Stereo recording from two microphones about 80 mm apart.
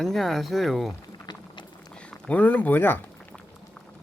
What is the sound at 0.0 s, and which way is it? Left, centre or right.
Speech, centre.